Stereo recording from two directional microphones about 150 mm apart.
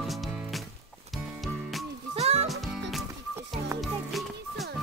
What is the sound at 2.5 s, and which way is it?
Music, centre (ahead or behind).